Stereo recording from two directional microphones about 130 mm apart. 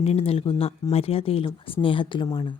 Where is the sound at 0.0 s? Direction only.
50° left (ahead or behind).